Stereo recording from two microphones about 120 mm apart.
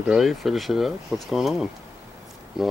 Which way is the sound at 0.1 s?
Centre (ahead or behind).